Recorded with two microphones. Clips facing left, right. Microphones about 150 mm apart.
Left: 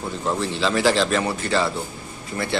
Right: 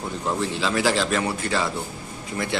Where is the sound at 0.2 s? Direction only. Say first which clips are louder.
Left 2 dB; 10° right (ahead or behind).